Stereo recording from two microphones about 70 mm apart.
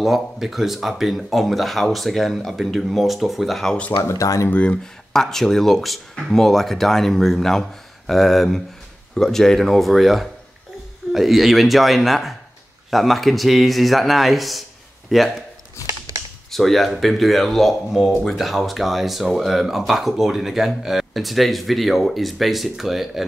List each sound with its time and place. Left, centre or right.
0.0 s speech: centre
3.9 s speech: left
4.5 s speech: centre
5.1 s speech: centre
16.4 s speech: centre